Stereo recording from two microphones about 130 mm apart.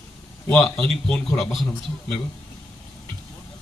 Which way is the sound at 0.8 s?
10° left (ahead or behind).